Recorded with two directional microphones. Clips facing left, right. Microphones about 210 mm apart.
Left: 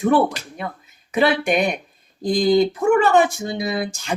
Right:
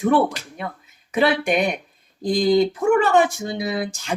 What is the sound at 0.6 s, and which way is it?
Speech, 40° left (ahead or behind).